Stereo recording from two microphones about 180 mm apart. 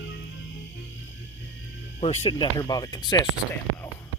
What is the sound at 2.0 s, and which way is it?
Speech, 35° left (ahead or behind).